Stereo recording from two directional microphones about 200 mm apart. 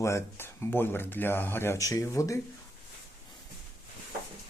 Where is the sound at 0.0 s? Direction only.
15° left (ahead or behind).